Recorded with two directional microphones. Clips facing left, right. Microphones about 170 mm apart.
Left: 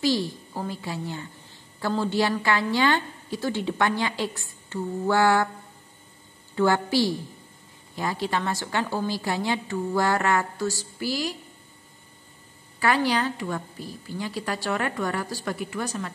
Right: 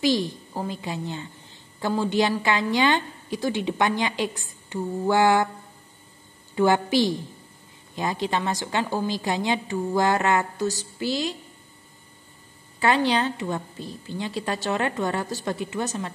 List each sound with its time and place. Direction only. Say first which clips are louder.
0.0 s a woman's voice: right 2 dB; 15° right (ahead or behind)
6.5 s a woman's voice: right 2 dB; 15° right (ahead or behind)
12.7 s a woman's voice: right 2 dB; 25° right (ahead or behind)